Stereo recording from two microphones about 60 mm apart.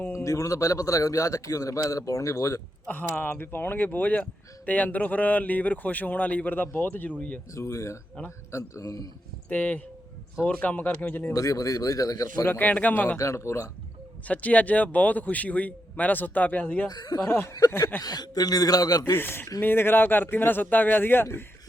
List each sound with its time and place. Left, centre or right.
0.1 s a man's voice: left
2.8 s speech: left
7.2 s speech: left
7.5 s a man's voice: left
9.5 s speech: left
11.3 s speech: left
12.5 s speech: left
13.1 s a man's voice: left
14.3 s speech: left
16.9 s a man's voice: left
19.1 s speech: left